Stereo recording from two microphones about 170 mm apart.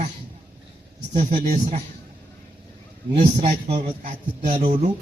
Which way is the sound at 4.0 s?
45° right (ahead or behind).